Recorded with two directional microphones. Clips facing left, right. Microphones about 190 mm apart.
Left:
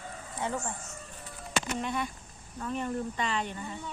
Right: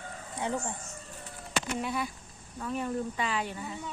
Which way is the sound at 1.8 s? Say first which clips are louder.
Even; 5° right (ahead or behind).